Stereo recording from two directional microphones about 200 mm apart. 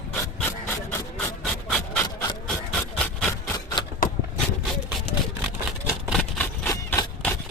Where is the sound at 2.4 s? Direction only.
5° left (ahead or behind).